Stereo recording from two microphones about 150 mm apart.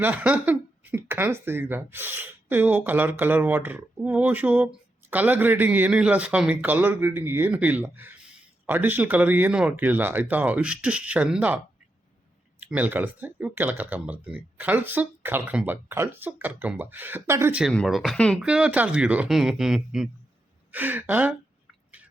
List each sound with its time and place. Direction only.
0.0 s speech: 10° right (ahead or behind)
17.6 s speech: centre (ahead or behind)
18.3 s speech: 5° right (ahead or behind)